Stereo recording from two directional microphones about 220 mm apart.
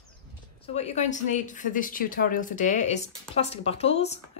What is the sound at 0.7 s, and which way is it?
Speech, 30° left (ahead or behind).